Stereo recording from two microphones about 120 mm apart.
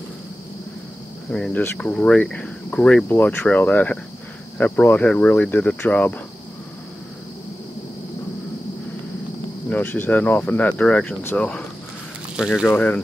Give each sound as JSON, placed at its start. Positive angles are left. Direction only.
{"t": 1.3, "sound": "speech", "side_deg": 5}
{"t": 9.7, "sound": "speech", "side_deg": 15}
{"t": 12.4, "sound": "speech", "side_deg": -5}
{"t": 12.6, "sound": "speech", "side_deg": 15}